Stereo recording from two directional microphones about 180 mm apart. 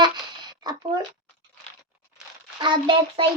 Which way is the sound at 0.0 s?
25° right (ahead or behind).